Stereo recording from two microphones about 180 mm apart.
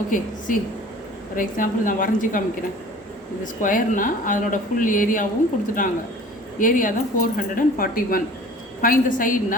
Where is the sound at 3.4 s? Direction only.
50° left (ahead or behind).